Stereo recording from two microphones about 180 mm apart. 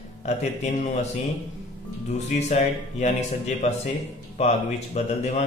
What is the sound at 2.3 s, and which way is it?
Speech, 40° left (ahead or behind).